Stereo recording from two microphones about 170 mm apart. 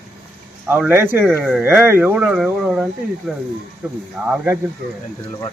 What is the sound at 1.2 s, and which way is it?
Speech, centre (ahead or behind).